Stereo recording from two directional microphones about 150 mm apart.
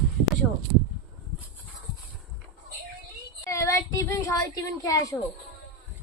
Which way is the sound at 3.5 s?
20° left (ahead or behind).